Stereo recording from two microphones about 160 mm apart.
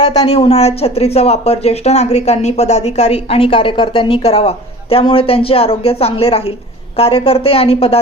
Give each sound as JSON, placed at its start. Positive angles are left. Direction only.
{"t": 0.0, "sound": "speech", "side_deg": 40}